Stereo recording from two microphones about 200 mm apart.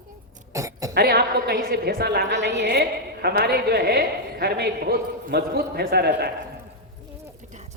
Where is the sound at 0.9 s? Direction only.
50° right (ahead or behind).